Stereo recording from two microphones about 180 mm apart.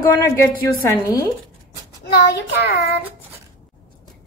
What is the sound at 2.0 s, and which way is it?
Speech, 65° left (ahead or behind).